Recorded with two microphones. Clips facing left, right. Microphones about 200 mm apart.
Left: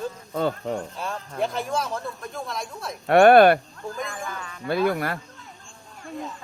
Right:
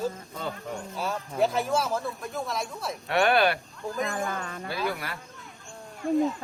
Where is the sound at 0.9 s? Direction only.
5° right (ahead or behind).